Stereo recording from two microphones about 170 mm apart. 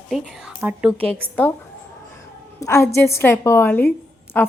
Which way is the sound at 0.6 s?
10° right (ahead or behind).